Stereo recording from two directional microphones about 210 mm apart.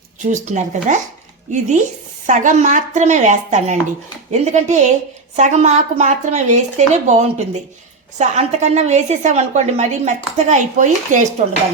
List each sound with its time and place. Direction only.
0.2 s a woman's voice: 35° right (ahead or behind)
2.2 s a woman's voice: 35° right (ahead or behind)